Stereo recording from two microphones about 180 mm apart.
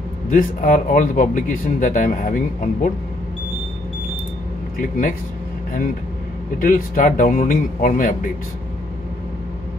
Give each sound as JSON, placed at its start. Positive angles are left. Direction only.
{"t": 0.3, "sound": "speech", "side_deg": 45}
{"t": 6.6, "sound": "speech", "side_deg": 50}